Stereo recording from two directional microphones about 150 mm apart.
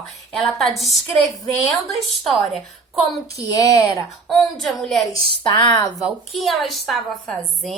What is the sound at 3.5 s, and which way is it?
Speech, 20° left (ahead or behind).